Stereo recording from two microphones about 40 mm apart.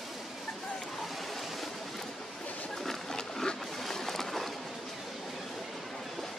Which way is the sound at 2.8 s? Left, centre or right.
Centre.